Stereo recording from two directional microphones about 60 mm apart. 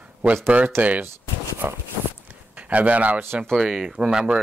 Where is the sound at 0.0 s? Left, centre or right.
Right.